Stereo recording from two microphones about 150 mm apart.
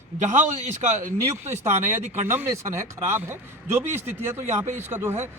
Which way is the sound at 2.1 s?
15° right (ahead or behind).